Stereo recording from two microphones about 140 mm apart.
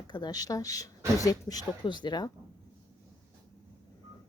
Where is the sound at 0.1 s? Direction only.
30° left (ahead or behind).